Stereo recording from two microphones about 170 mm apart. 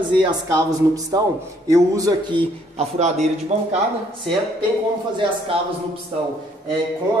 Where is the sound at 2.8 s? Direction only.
40° right (ahead or behind).